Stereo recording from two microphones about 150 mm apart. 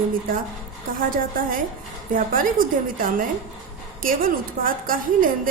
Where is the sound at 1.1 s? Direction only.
70° right (ahead or behind).